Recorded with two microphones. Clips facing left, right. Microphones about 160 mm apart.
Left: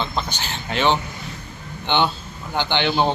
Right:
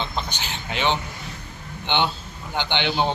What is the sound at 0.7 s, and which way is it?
Speech, 50° left (ahead or behind).